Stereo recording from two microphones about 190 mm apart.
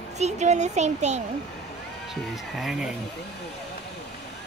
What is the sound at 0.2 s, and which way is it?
Speech, 35° right (ahead or behind).